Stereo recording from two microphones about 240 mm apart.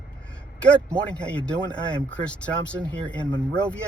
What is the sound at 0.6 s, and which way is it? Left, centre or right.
Speech, centre.